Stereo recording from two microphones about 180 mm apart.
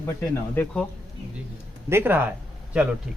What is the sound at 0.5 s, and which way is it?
Speech, 10° left (ahead or behind).